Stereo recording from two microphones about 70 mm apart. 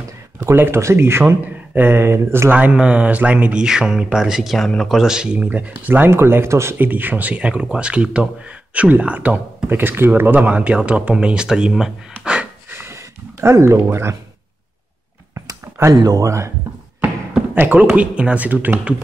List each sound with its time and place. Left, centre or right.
0.6 s speech: right
2.5 s speech: centre
3.6 s speech: centre; by 6.9 s right
6.9 s speech: right
9.7 s speech: right; by 11.9 s centre
12.6 s a sound: right
15.9 s speech: right
16.3 s speech: right
17.6 s speech: right